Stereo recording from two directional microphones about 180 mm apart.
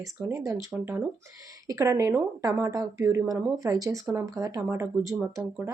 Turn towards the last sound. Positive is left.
turn(degrees=-15)  # may be behind; listen again after turning